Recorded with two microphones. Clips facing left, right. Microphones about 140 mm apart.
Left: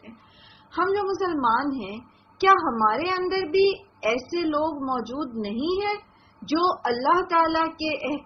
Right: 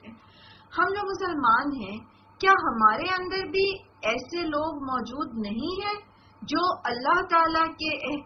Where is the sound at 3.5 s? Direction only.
50° left (ahead or behind).